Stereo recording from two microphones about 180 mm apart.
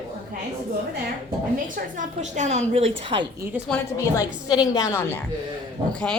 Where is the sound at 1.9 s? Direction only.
40° right (ahead or behind).